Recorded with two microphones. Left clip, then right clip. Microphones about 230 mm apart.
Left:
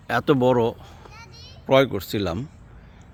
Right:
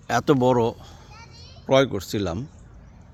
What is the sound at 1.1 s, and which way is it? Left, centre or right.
Children playing, left.